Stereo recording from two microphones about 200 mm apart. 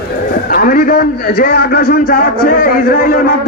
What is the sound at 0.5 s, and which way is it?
A man's voice, 45° left (ahead or behind).